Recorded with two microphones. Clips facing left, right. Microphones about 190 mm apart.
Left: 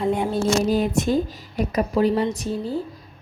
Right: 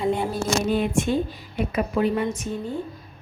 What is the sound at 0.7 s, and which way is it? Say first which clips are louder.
A woman's voice: left 2 dB; 40° left (ahead or behind).